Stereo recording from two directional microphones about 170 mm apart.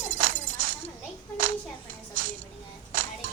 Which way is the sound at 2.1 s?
55° right (ahead or behind).